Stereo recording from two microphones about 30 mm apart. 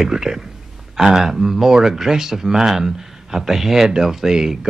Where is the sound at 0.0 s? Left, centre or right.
Centre.